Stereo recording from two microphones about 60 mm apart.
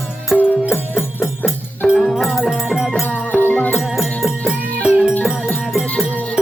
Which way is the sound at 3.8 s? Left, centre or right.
Centre.